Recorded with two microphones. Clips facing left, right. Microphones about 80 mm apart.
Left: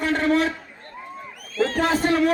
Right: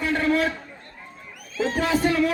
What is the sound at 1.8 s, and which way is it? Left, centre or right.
Speech, left.